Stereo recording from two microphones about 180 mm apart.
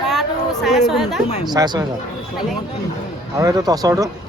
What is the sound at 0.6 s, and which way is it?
Speech, centre (ahead or behind).